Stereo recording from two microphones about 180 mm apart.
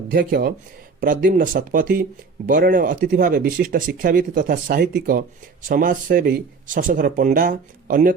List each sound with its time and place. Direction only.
0.1 s speech: 55° right (ahead or behind)